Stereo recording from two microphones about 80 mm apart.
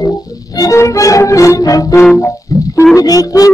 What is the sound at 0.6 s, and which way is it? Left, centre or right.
Music, left.